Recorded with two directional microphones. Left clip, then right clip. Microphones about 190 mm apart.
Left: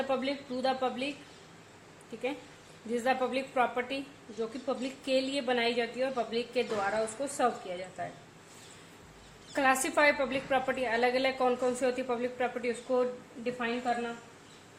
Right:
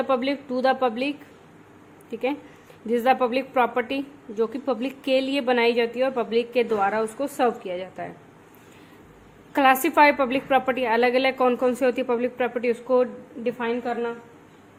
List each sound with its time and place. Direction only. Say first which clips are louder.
0.1 s a woman's voice: right 9 dB; 40° right (ahead or behind)
2.9 s a woman's voice: right 9 dB; 45° right (ahead or behind)
9.6 s a woman's voice: right 9 dB; 45° right (ahead or behind)